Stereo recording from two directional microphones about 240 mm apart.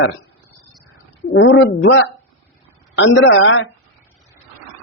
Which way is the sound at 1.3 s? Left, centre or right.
Left.